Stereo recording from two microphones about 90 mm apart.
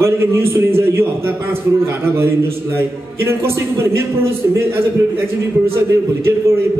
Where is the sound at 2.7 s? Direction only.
30° right (ahead or behind).